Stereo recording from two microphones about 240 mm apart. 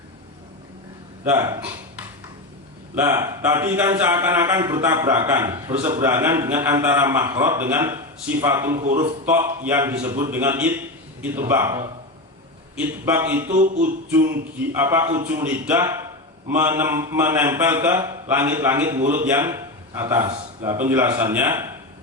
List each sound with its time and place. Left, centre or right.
1.2 s a man's voice: centre
13.5 s a sound: right
14.6 s a man's voice: centre